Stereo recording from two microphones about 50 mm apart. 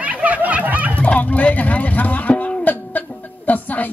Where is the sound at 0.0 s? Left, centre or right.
Right.